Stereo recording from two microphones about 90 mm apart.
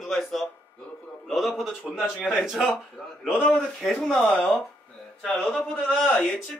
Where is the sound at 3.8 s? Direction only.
5° left (ahead or behind).